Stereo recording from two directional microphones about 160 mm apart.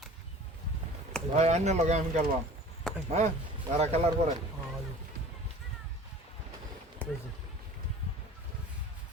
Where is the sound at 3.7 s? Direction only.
40° right (ahead or behind).